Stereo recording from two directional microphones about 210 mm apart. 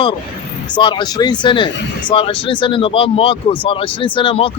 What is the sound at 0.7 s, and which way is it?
Speech, 20° left (ahead or behind).